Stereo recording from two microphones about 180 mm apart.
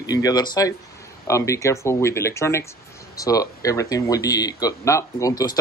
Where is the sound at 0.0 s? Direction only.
20° left (ahead or behind).